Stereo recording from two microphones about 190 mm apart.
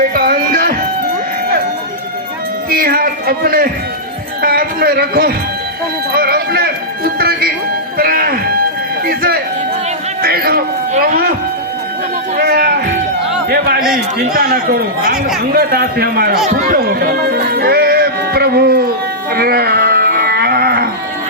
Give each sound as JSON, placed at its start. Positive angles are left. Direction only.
{"t": 0.0, "sound": "a sound", "side_deg": -50}
{"t": 2.6, "sound": "a sound", "side_deg": -50}
{"t": 4.4, "sound": "a man's voice", "side_deg": -50}
{"t": 12.4, "sound": "a man's voice", "side_deg": -55}
{"t": 16.5, "sound": "music", "side_deg": -50}
{"t": 19.3, "sound": "livestock", "side_deg": -55}